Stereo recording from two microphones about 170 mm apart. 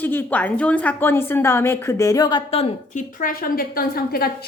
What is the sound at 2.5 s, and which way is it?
A woman's voice, 35° left (ahead or behind).